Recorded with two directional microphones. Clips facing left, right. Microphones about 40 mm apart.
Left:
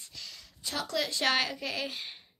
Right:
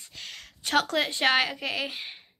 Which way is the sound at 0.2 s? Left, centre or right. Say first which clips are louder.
Right 5 dB; right.